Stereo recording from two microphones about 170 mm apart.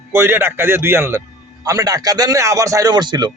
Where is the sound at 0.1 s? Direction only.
15° right (ahead or behind).